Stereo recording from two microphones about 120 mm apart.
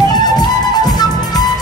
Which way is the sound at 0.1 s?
35° left (ahead or behind).